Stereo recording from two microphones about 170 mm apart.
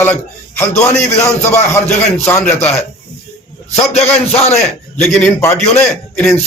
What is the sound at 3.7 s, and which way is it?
A man's voice, 40° left (ahead or behind).